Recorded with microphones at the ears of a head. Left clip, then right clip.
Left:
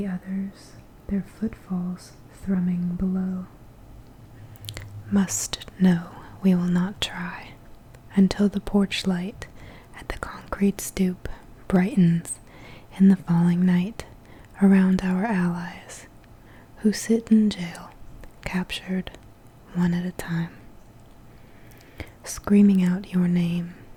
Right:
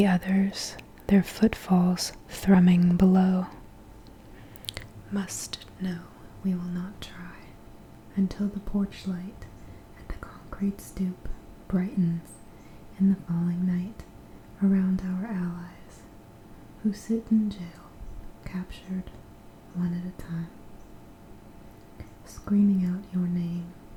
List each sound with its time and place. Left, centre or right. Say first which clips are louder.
0.0 s speech: right 8 dB; right
5.0 s speech: left 9 dB; left
9.9 s whispering: left 11 dB; left
11.7 s speech: left 8 dB; left
21.9 s speech: left 13 dB; left